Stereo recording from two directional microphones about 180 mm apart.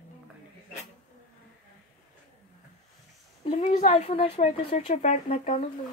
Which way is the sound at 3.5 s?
40° left (ahead or behind).